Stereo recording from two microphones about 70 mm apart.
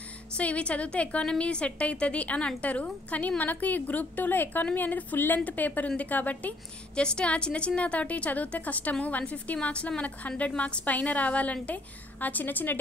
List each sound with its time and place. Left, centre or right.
0.4 s a woman's voice: centre